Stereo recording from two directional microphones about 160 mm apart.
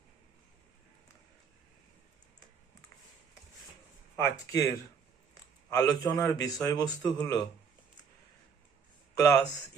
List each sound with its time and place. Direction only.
4.2 s speech: 20° left (ahead or behind)
5.7 s a man's voice: 20° left (ahead or behind)
9.1 s speech: 20° left (ahead or behind)